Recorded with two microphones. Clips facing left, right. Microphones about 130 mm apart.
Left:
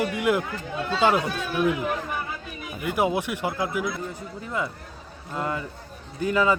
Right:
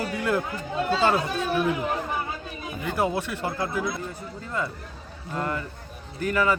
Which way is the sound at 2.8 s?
15° left (ahead or behind).